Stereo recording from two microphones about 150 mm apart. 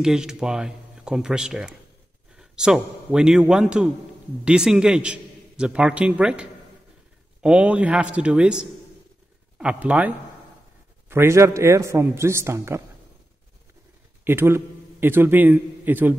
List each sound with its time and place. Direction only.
0.0 s a man's voice: 5° right (ahead or behind)
14.2 s a man's voice: 15° right (ahead or behind)